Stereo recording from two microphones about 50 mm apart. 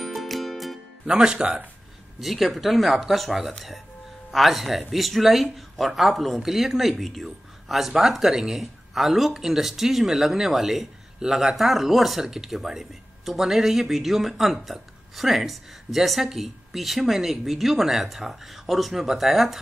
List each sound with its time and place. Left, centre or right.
0.0 s music: centre
1.0 s speech: centre
2.1 s speech: centre